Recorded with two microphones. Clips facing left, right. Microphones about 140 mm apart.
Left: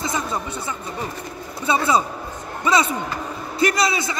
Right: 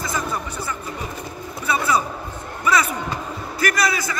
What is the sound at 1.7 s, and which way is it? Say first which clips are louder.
A man's voice: left 2 dB; 25° left (ahead or behind).